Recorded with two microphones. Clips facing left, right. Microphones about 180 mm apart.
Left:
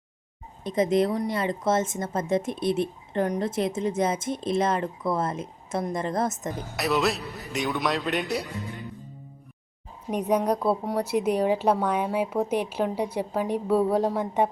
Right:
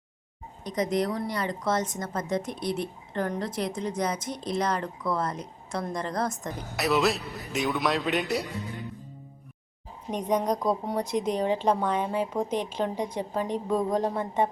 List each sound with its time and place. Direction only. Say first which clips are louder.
0.6 s a woman's voice: left 4 dB; 25° left (ahead or behind)
6.7 s a man's voice: right 1 dB; centre (ahead or behind)
10.1 s a woman's voice: left 2 dB; 10° left (ahead or behind)